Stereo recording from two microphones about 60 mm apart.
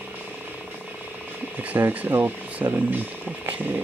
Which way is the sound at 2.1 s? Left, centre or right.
Right.